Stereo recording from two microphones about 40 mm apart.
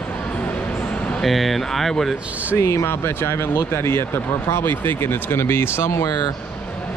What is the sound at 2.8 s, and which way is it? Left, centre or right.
Speech, left.